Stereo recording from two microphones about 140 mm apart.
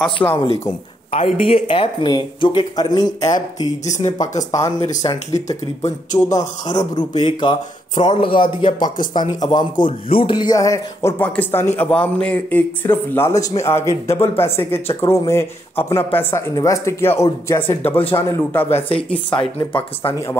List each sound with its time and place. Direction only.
0.0 s speech: 10° left (ahead or behind)
0.5 s speech: 45° left (ahead or behind); by 3.1 s 30° left (ahead or behind)
3.8 s speech: 60° left (ahead or behind)
4.4 s speech: 25° left (ahead or behind)
7.0 s speech: 30° left (ahead or behind); by 18.9 s 15° left (ahead or behind)
19.3 s speech: 35° left (ahead or behind)
20.0 s speech: 20° left (ahead or behind)